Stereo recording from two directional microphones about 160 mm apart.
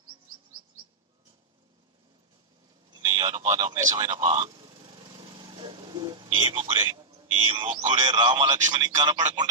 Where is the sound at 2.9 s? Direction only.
25° right (ahead or behind).